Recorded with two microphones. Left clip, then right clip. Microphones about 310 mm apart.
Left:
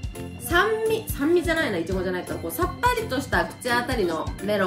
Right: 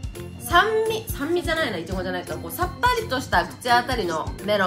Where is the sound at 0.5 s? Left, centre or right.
Centre.